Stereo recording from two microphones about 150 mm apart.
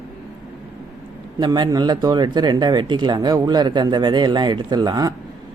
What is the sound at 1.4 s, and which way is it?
Speech, 30° right (ahead or behind).